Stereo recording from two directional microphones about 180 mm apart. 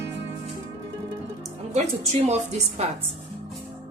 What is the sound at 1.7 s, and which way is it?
A woman's voice, 40° right (ahead or behind).